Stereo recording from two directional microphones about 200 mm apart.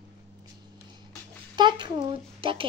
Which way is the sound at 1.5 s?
25° right (ahead or behind).